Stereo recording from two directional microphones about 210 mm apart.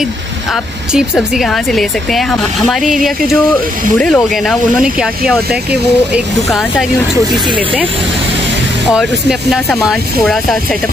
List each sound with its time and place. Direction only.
0.9 s speech: centre (ahead or behind)
8.9 s speech: centre (ahead or behind)